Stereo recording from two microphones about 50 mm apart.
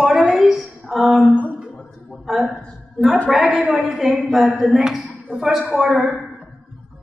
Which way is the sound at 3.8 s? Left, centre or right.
Centre.